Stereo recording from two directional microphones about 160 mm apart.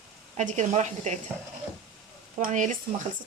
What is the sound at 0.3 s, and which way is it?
Speech, 50° right (ahead or behind).